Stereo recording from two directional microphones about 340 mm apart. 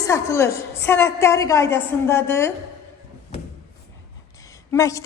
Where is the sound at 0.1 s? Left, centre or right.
Centre.